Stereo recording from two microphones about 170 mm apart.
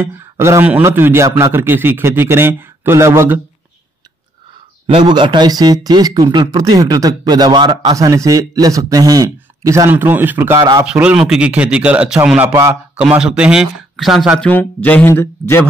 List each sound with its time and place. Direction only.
0.0 s a man's voice: 15° right (ahead or behind)
4.8 s speech: 30° right (ahead or behind)
10.9 s a man's voice: 5° right (ahead or behind)
14.5 s speech: 10° left (ahead or behind)